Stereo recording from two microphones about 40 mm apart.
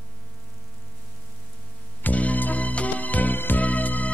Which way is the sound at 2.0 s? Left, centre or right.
Left.